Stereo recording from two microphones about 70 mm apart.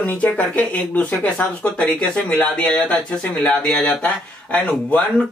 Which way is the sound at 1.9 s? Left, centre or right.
Centre.